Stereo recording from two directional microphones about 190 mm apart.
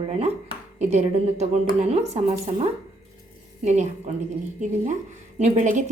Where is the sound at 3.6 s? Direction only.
35° right (ahead or behind).